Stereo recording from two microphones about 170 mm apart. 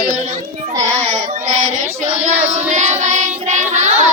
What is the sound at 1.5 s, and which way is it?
Child singing, 45° right (ahead or behind).